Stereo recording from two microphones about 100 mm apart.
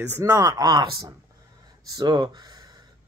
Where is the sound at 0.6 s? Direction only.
45° right (ahead or behind).